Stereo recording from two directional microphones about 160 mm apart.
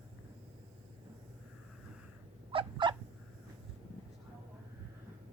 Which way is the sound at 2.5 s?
30° right (ahead or behind).